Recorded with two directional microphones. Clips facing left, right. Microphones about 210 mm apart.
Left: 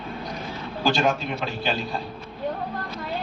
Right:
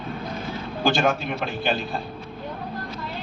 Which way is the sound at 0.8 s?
55° right (ahead or behind).